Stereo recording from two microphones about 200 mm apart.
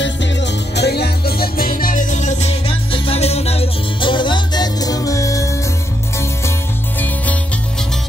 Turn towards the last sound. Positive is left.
turn(degrees=10)  # may be behind; listen again after turning